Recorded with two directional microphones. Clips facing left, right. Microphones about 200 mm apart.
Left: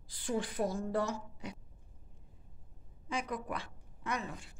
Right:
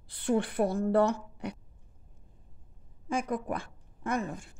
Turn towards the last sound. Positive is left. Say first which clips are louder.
# right 7 dB
turn(degrees=-50)  # may be behind; listen again after turning